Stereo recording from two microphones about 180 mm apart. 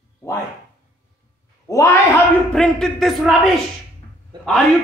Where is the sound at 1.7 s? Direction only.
15° left (ahead or behind).